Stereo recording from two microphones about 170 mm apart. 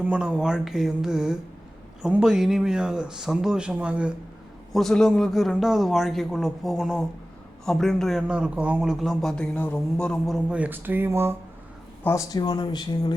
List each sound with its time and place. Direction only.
0.0 s a man's voice: 5° right (ahead or behind)
12.0 s speech: 20° left (ahead or behind)